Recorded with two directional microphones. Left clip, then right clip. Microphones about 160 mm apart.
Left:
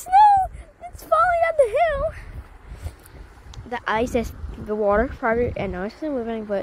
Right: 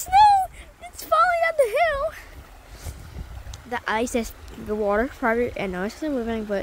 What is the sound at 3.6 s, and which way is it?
Speech, 5° right (ahead or behind).